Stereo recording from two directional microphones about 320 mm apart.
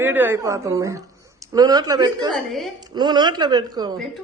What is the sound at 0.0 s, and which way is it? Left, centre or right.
Speech, centre.